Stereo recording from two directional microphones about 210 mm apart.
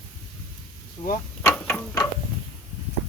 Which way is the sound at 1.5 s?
10° left (ahead or behind).